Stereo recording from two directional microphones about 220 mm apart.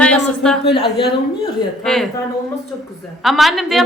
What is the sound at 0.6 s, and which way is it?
Speech, 50° left (ahead or behind).